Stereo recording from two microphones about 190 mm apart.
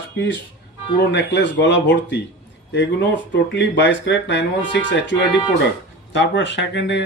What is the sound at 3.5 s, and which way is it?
Speech, 65° left (ahead or behind).